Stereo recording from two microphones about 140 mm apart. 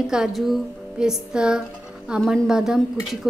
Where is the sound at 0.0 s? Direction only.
5° right (ahead or behind).